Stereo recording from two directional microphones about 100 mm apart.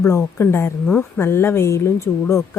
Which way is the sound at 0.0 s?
30° left (ahead or behind).